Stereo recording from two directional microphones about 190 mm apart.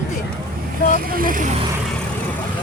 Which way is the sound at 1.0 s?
50° right (ahead or behind).